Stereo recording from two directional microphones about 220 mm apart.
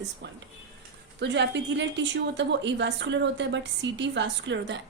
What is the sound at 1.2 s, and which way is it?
A woman's voice, 55° right (ahead or behind).